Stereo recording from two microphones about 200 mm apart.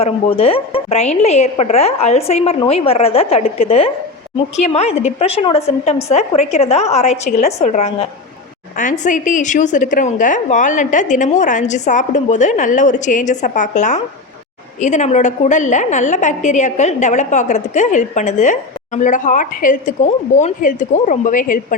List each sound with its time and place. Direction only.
0.0 s a woman's voice: 30° left (ahead or behind)